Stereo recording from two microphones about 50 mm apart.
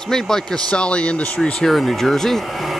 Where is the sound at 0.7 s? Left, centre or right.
Left.